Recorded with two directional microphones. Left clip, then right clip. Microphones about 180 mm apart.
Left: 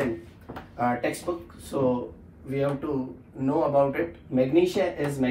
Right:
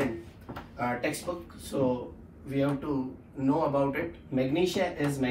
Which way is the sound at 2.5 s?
15° left (ahead or behind).